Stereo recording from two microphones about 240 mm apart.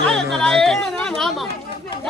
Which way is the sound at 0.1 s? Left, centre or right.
Centre.